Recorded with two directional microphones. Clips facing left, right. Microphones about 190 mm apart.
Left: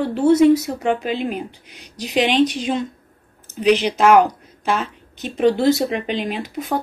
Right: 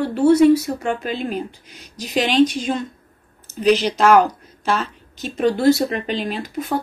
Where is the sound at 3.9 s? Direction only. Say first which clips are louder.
Left 1 dB; 10° left (ahead or behind).